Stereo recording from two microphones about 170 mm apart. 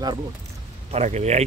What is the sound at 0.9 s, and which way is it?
Speech, 40° right (ahead or behind).